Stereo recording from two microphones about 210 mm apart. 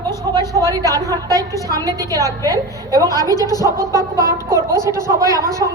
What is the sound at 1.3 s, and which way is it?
Speech, 15° left (ahead or behind).